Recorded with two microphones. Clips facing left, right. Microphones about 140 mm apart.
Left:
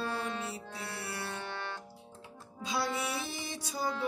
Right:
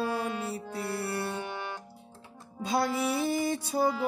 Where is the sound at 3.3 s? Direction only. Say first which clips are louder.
Right 11 dB; 55° right (ahead or behind).